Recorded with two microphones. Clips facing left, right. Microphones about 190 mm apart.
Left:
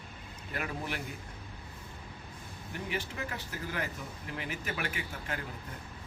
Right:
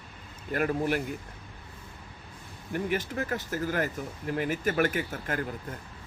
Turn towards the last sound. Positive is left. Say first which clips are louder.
# right 7 dB
turn(degrees=-45)  # may be behind; listen again after turning